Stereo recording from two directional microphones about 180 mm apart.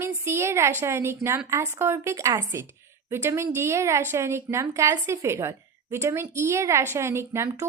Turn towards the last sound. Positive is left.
turn(degrees=-15)  # may be behind; listen again after turning